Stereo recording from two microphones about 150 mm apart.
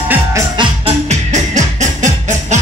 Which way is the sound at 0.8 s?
50° right (ahead or behind).